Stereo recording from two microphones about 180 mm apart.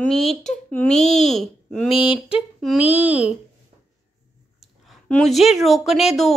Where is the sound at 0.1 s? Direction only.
Centre (ahead or behind).